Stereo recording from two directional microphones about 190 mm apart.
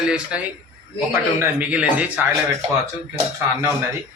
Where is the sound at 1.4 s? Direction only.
5° right (ahead or behind).